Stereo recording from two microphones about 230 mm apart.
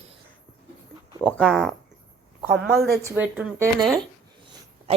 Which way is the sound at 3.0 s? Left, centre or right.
Centre.